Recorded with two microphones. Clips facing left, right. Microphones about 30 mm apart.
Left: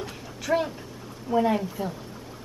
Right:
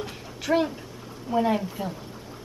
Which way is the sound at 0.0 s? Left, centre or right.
Centre.